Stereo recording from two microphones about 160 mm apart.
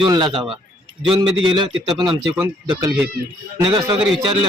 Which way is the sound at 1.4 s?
30° right (ahead or behind).